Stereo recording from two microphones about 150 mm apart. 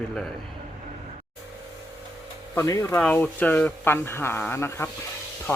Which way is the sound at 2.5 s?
20° left (ahead or behind).